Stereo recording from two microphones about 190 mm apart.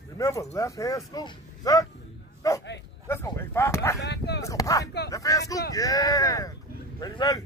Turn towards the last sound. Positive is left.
turn(degrees=20)  # may be behind; listen again after turning